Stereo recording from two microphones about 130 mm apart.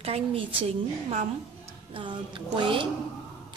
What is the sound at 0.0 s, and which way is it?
A woman's voice, 45° right (ahead or behind).